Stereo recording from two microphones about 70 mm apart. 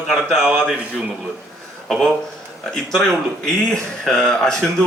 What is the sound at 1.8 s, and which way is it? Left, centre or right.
Speech, centre.